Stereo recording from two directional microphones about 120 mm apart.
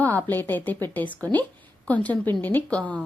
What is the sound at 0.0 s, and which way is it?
Speech, 15° left (ahead or behind).